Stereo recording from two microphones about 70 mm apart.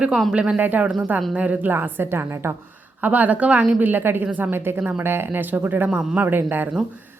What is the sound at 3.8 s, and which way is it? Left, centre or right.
Speech, right.